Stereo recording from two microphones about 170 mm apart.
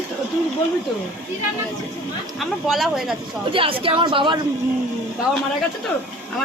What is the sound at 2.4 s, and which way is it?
Speech, centre (ahead or behind).